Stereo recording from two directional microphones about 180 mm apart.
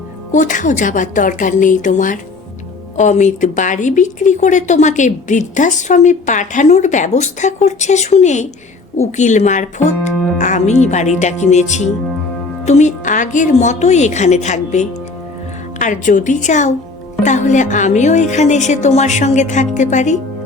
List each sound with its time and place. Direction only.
0.3 s a woman's voice: 45° left (ahead or behind)